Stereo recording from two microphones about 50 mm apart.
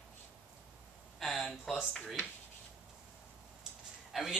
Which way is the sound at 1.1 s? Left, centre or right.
Centre.